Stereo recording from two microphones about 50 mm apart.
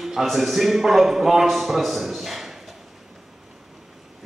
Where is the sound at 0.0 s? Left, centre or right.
Centre.